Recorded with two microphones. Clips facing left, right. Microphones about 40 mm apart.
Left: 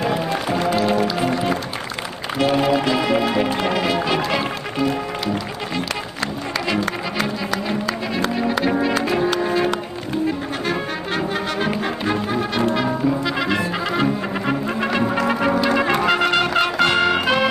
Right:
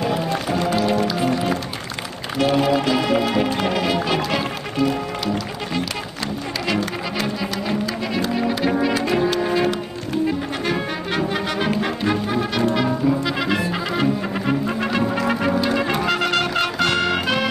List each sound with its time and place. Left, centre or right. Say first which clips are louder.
0.0 s music: left 1 dB; centre
3.6 s speech: left 1 dB; centre
4.4 s music: even; centre
8.4 s music: even; centre
10.7 s brass instrument: even; left
12.6 s brass instrument: right 1 dB; centre
16.8 s music: left 3 dB; centre